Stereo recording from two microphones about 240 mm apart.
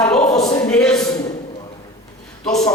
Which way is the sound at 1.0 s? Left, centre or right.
Centre.